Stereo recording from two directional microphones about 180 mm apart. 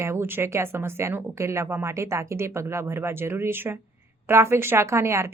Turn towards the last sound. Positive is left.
turn(degrees=-15)  # may be behind; listen again after turning